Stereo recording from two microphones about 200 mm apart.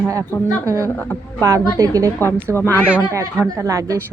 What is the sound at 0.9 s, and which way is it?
Speech, 10° left (ahead or behind).